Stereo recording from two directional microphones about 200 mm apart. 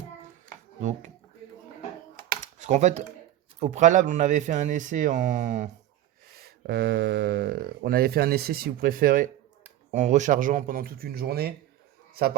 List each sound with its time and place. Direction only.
0.8 s speech: 40° right (ahead or behind)
2.4 s a sound: 35° right (ahead or behind)
3.6 s speech: 35° right (ahead or behind)
6.4 s speech: 50° right (ahead or behind)